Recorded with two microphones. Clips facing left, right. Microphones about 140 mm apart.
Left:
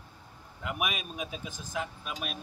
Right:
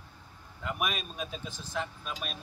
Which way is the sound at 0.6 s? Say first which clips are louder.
Even; 5° left (ahead or behind).